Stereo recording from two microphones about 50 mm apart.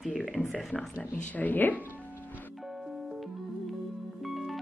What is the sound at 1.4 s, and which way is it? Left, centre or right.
Speech, left.